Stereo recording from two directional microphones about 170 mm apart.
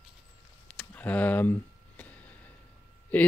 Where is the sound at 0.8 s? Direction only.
10° left (ahead or behind).